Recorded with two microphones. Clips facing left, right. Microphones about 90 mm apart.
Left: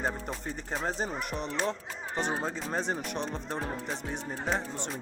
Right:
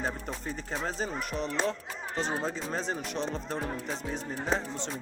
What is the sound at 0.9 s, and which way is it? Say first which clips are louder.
Speech: left 1 dB; 20° left (ahead or behind).